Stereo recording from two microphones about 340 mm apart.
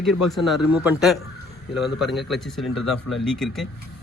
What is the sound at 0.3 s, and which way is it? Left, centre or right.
A man's voice, centre.